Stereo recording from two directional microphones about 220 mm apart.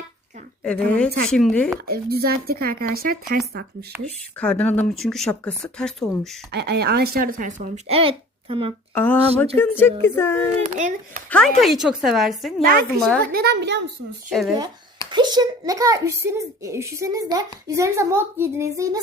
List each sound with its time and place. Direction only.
0.6 s speech: 5° left (ahead or behind)
1.9 s speech: 45° right (ahead or behind)
4.4 s speech: 5° left (ahead or behind)
6.5 s speech: 50° right (ahead or behind); by 8.7 s 25° right (ahead or behind)
9.0 s speech: 10° left (ahead or behind)
10.6 s speech: 35° right (ahead or behind)
11.3 s speech: 5° left (ahead or behind)
13.3 s speech: 45° right (ahead or behind)
15.1 s a child's voice: 20° right (ahead or behind)